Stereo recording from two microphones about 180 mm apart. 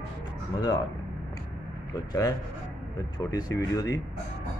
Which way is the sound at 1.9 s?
20° left (ahead or behind).